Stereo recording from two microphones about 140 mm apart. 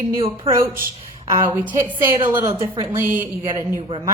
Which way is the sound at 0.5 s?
20° right (ahead or behind).